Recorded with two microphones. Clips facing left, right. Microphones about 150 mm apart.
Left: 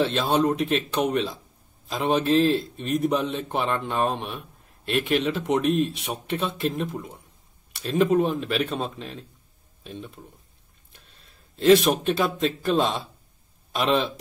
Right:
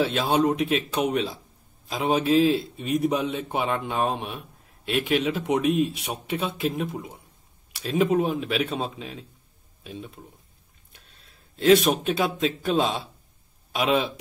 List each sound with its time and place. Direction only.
0.0 s a man's voice: 5° right (ahead or behind)